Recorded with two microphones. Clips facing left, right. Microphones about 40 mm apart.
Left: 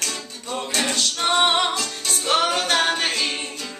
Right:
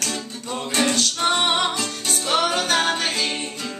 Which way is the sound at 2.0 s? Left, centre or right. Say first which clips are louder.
Left 1 dB; centre.